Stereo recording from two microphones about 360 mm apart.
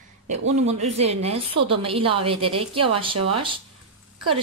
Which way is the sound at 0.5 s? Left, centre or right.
Centre.